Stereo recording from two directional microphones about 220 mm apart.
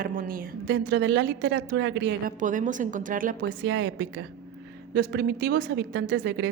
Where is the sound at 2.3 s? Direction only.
35° right (ahead or behind).